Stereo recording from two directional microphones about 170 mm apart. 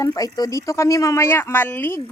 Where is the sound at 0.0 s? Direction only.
20° left (ahead or behind).